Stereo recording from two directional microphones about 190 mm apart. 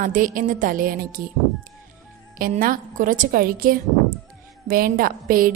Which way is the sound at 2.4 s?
50° right (ahead or behind).